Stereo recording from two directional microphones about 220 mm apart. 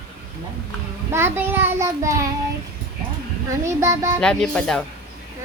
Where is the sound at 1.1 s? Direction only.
10° right (ahead or behind).